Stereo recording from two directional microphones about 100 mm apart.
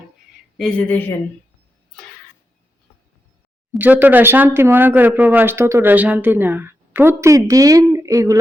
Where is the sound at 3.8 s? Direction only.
15° right (ahead or behind).